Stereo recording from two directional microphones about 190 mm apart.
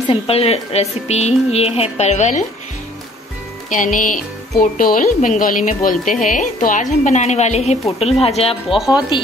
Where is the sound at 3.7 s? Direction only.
45° left (ahead or behind).